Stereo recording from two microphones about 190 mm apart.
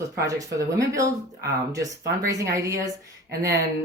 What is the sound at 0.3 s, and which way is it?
A woman's voice, 15° right (ahead or behind).